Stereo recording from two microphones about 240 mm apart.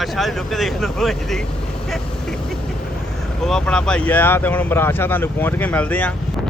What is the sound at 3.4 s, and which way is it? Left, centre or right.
Speech, centre.